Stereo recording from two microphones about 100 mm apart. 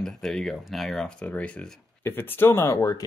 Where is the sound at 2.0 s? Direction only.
20° left (ahead or behind).